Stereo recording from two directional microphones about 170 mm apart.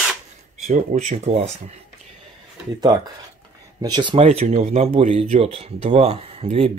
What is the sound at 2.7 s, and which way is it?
Speech, 25° right (ahead or behind).